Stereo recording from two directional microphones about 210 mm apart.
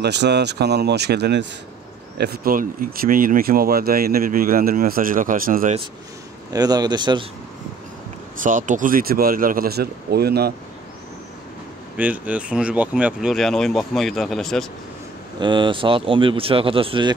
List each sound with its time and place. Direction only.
0.0 s speech: 55° right (ahead or behind)
6.5 s speech: 20° right (ahead or behind)
8.4 s speech: 35° right (ahead or behind)
12.0 s speech: 5° right (ahead or behind)
15.4 s speech: 25° right (ahead or behind)